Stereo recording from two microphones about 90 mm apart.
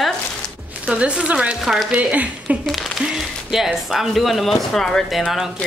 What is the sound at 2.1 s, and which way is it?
Speech, 15° right (ahead or behind).